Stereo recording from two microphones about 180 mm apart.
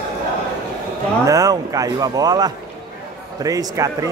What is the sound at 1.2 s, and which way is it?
A man's voice, 20° right (ahead or behind).